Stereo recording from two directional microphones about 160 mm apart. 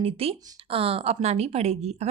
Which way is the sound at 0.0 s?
35° right (ahead or behind).